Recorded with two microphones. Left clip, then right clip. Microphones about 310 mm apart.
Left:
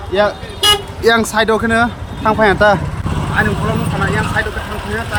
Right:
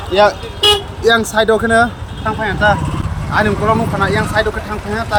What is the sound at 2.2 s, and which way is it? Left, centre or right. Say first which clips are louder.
Speech: left 4 dB; centre.